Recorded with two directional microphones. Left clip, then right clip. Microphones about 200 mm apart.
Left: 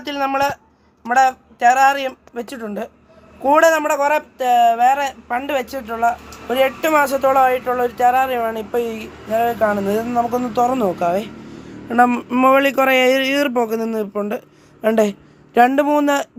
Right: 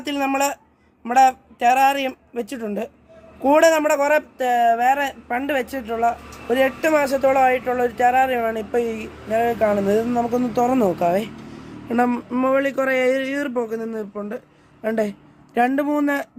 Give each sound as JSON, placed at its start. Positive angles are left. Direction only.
{"t": 0.0, "sound": "speech", "side_deg": -25}
{"t": 11.9, "sound": "a sound", "side_deg": 5}
{"t": 12.3, "sound": "speech", "side_deg": 25}